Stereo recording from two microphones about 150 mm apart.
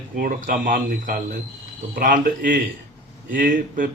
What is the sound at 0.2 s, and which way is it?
Speech, 65° right (ahead or behind).